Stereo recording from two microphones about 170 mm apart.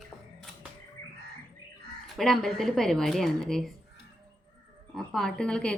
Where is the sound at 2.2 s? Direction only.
Centre (ahead or behind).